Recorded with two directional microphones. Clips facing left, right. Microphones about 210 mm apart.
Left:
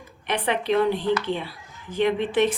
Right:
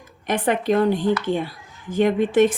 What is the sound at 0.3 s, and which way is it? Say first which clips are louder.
Speech: right 4 dB; 45° right (ahead or behind).